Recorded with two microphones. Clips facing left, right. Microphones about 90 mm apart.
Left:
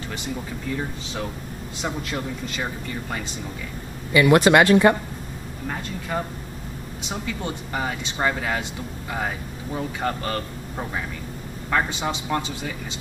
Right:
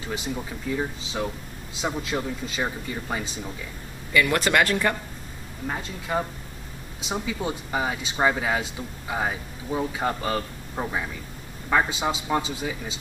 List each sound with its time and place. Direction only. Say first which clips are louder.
0.7 s speech: right 2 dB; 5° right (ahead or behind)
4.1 s speech: left 6 dB; 20° left (ahead or behind)
5.7 s speech: even; 10° right (ahead or behind)